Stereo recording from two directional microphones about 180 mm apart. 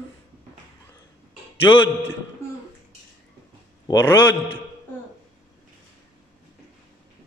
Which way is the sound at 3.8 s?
20° left (ahead or behind).